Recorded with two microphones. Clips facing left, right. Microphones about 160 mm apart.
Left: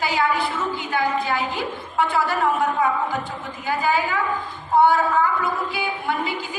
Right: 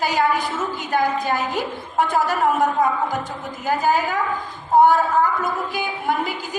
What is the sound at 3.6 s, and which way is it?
A woman's voice, 40° right (ahead or behind).